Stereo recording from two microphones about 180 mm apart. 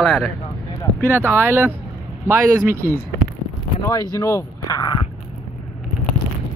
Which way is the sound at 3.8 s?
20° left (ahead or behind).